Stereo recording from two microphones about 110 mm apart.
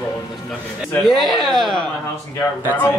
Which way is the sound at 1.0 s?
Centre (ahead or behind).